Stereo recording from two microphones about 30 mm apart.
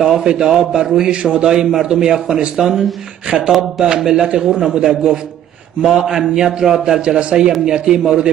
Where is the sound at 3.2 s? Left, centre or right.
Right.